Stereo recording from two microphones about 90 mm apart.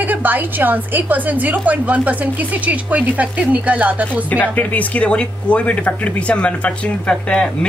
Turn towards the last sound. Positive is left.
turn(degrees=10)  # may be behind; listen again after turning